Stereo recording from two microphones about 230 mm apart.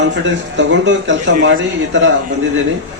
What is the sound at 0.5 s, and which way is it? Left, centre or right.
A man's voice, right.